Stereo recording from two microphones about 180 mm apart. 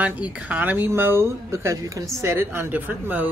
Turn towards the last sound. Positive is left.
turn(degrees=-10)  # may be behind; listen again after turning